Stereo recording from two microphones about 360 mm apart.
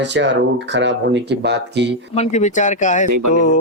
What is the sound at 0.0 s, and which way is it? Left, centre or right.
Speech, right.